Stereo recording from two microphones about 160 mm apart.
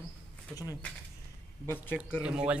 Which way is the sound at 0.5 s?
20° left (ahead or behind).